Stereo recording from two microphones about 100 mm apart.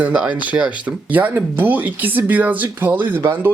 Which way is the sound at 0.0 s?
10° right (ahead or behind).